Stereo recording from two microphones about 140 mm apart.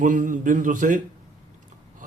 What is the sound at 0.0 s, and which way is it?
Speech, 70° right (ahead or behind).